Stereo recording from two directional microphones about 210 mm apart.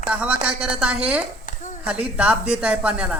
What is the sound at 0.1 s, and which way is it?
Speech, 5° right (ahead or behind).